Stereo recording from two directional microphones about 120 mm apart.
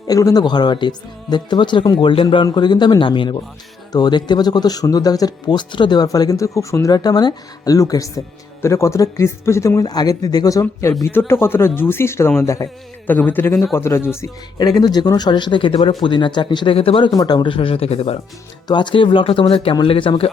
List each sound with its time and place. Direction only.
0.1 s speech: 30° left (ahead or behind)
14.6 s speech: 35° left (ahead or behind); by 17.1 s 50° left (ahead or behind)
17.2 s speech: 35° left (ahead or behind); by 18.2 s 55° left (ahead or behind)
18.7 s speech: 40° left (ahead or behind)